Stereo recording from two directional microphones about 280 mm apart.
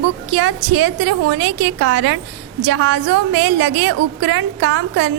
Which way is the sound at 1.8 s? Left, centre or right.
Right.